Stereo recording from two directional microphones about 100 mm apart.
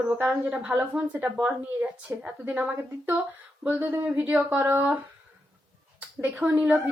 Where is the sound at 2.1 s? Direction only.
25° right (ahead or behind).